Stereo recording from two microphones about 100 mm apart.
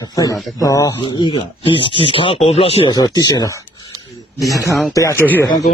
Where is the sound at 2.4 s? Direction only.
85° left.